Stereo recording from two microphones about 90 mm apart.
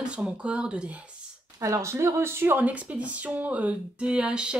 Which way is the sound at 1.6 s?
35° right (ahead or behind).